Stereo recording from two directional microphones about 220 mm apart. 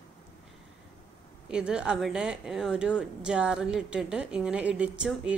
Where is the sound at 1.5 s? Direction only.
5° right (ahead or behind).